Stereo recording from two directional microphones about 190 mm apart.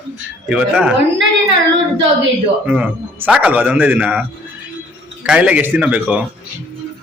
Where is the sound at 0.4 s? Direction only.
5° right (ahead or behind).